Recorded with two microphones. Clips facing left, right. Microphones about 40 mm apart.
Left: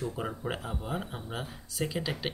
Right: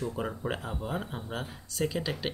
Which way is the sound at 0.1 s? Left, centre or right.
Centre.